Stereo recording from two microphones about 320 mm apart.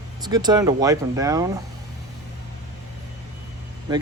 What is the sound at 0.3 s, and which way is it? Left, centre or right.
Speech, centre.